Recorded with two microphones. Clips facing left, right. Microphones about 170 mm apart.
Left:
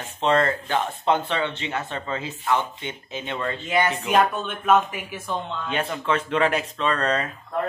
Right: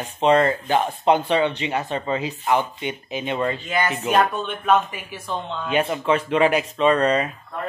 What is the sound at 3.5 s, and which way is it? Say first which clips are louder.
Speech: left 1 dB; 20° left (ahead or behind).